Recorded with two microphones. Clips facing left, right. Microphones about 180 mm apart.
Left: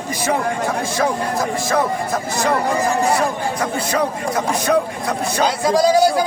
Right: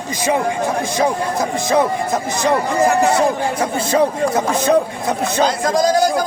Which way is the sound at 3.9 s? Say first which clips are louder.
Right 8 dB; 25° right (ahead or behind).